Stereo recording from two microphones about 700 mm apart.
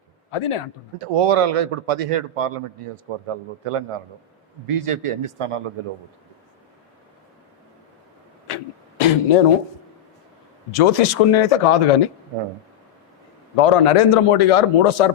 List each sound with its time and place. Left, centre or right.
0.3 s a man's voice: left
0.9 s a man's voice: right
9.0 s a sound: left
10.7 s a man's voice: left
13.6 s a man's voice: left